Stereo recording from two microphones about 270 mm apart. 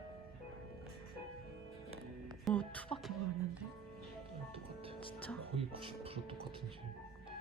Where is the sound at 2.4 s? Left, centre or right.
Centre.